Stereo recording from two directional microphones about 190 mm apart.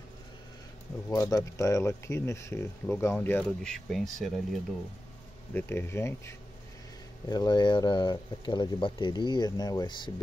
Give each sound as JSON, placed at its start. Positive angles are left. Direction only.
{"t": 1.1, "sound": "speech", "side_deg": 15}
{"t": 5.5, "sound": "speech", "side_deg": 10}